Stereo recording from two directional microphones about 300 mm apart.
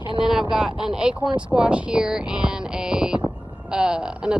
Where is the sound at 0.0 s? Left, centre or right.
Centre.